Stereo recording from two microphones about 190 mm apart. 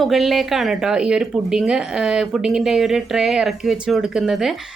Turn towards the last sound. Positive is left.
turn(degrees=0)  # may be behind; listen again after turning